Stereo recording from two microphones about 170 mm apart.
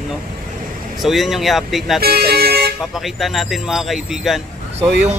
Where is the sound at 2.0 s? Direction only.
65° right (ahead or behind).